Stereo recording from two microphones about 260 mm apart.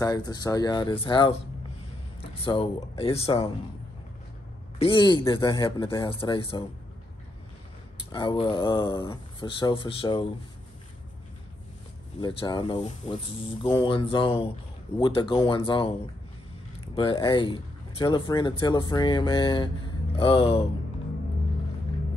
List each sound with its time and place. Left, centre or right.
0.0 s speech: centre
2.4 s speech: centre
4.7 s speech: centre
8.1 s speech: centre
12.2 s speech: centre
16.9 s speech: centre